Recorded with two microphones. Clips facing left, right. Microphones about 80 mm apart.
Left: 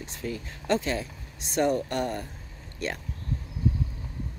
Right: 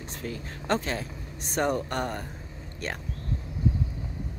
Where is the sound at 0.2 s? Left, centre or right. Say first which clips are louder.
Left 2 dB; right.